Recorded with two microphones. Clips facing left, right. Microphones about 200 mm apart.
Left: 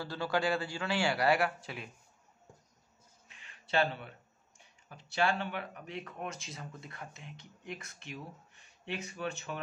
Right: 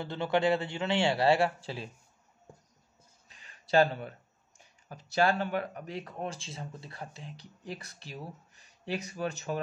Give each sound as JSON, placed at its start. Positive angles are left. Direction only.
{"t": 0.0, "sound": "a man's voice", "side_deg": -20}
{"t": 3.3, "sound": "a sound", "side_deg": -40}
{"t": 4.8, "sound": "speech", "side_deg": -40}